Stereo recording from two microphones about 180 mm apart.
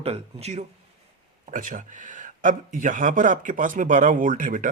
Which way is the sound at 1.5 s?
45° right (ahead or behind).